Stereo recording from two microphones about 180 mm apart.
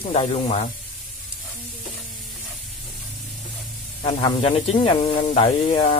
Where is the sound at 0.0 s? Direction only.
30° left (ahead or behind).